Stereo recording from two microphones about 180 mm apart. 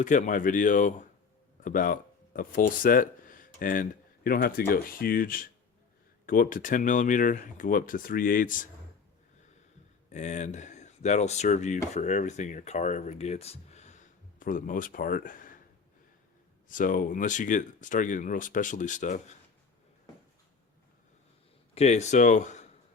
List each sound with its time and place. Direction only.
0.0 s speech: 45° left (ahead or behind)
10.1 s speech: 40° left (ahead or behind)
16.6 s speech: 50° left (ahead or behind)
21.8 s speech: 40° left (ahead or behind)